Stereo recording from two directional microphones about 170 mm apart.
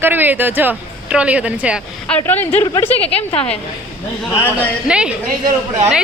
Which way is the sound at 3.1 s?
35° left (ahead or behind).